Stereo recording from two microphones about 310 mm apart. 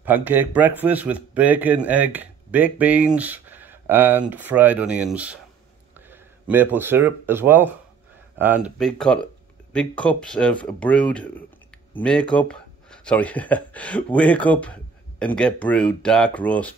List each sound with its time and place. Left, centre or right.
0.0 s a man's voice: centre